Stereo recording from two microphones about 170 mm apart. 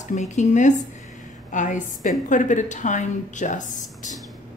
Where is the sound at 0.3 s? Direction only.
45° left (ahead or behind).